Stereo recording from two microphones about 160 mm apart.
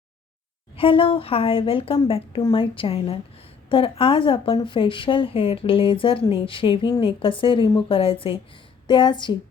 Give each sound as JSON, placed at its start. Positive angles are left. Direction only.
{"t": 0.8, "sound": "speech", "side_deg": 35}